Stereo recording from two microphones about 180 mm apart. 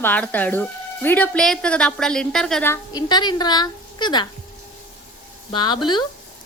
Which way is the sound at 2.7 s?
25° left (ahead or behind).